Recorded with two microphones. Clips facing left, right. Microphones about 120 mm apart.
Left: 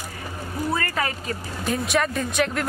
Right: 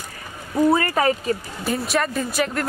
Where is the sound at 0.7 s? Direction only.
30° right (ahead or behind).